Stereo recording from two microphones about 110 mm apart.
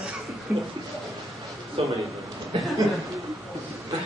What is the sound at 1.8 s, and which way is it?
Speech, 60° right (ahead or behind).